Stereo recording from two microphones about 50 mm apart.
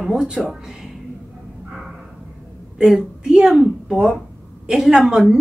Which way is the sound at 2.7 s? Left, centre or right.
Centre.